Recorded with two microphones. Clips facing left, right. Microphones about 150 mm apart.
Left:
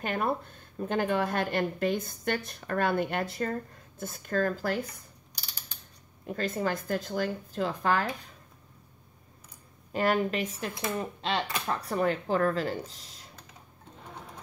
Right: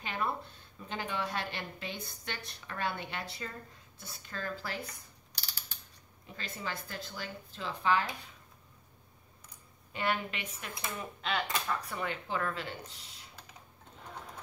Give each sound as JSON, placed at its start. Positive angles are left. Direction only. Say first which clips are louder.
{"t": 0.0, "sound": "speech", "louder": "left 6 dB", "side_deg": 50}
{"t": 6.2, "sound": "speech", "louder": "left 11 dB", "side_deg": 50}
{"t": 9.9, "sound": "speech", "louder": "left 8 dB", "side_deg": 40}